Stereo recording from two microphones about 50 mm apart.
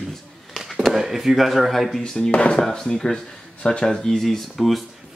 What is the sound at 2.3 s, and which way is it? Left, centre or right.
Speech, left.